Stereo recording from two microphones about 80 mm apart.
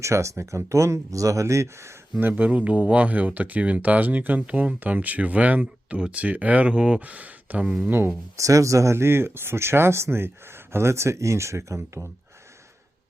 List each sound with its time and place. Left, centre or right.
0.0 s speech: right
2.1 s speech: right
8.4 s speech: right